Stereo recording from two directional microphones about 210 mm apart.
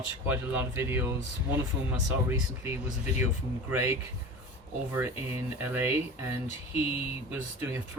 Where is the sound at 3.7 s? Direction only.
10° right (ahead or behind).